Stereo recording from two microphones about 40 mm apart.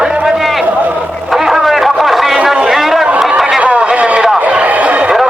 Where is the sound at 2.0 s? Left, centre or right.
Centre.